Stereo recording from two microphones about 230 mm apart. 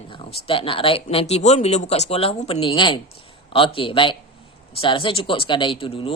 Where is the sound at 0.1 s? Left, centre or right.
Left.